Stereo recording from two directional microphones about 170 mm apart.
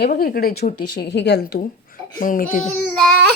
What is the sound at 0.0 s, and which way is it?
Speech, 60° left (ahead or behind).